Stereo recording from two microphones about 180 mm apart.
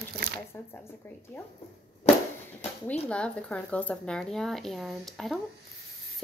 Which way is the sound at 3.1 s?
5° left (ahead or behind).